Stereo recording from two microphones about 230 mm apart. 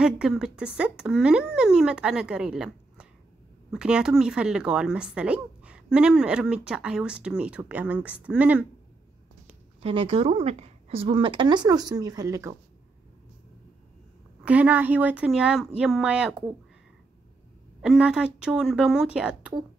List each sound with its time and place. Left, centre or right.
0.0 s speech: centre
9.8 s speech: right
14.4 s speech: centre
17.8 s speech: centre